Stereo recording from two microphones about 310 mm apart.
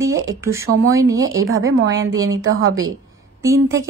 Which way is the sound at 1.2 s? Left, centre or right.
Right.